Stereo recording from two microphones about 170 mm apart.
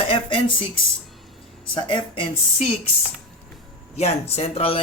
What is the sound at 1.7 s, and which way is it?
Speech, 30° left (ahead or behind).